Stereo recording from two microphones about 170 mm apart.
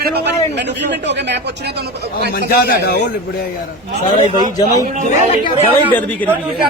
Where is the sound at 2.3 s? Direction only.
65° left (ahead or behind).